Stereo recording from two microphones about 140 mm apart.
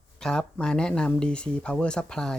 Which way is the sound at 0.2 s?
5° left (ahead or behind).